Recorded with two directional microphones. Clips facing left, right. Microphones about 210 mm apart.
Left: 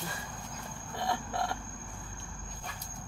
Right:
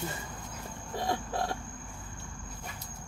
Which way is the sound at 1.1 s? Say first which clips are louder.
Right 1 dB; 35° right (ahead or behind).